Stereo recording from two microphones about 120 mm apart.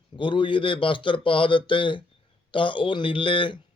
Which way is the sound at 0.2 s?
45° left (ahead or behind).